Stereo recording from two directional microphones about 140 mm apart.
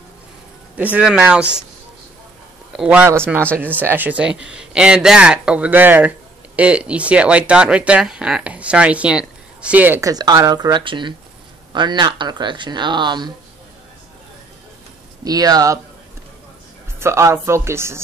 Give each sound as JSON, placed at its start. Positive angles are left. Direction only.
{"t": 0.9, "sound": "a man's voice", "side_deg": -5}
{"t": 2.7, "sound": "a man's voice", "side_deg": -10}
{"t": 15.2, "sound": "speech", "side_deg": -25}
{"t": 17.0, "sound": "speech", "side_deg": -20}